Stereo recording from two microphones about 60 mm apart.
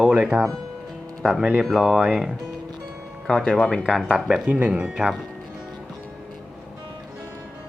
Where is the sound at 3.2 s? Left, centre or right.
Centre.